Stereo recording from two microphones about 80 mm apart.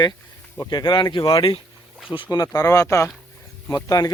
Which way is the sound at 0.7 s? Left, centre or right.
Left.